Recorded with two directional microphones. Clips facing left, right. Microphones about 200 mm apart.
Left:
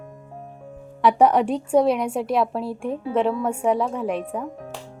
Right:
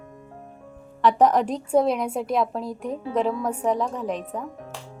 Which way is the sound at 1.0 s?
10° left (ahead or behind).